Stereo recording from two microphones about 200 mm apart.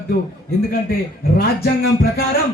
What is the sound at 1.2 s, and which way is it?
Speech, 50° left (ahead or behind).